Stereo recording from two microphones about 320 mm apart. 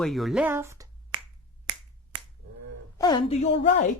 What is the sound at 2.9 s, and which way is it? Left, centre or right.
Speech, centre.